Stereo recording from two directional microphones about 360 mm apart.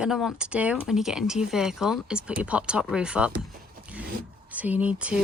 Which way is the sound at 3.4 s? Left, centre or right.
Centre.